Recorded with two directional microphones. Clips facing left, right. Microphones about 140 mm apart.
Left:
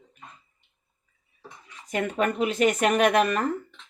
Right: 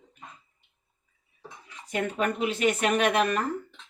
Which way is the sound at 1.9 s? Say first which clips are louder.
Left 2 dB; 45° left (ahead or behind).